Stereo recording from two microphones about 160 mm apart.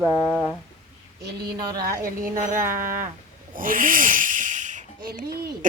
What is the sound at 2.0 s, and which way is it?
Speech, 55° right (ahead or behind).